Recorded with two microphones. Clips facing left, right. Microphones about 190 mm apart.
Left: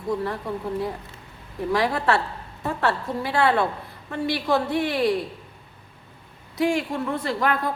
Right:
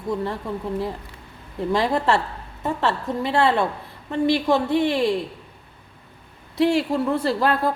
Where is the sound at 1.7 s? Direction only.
25° right (ahead or behind).